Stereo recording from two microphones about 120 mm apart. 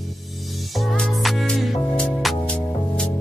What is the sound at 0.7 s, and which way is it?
Music, 5° left (ahead or behind).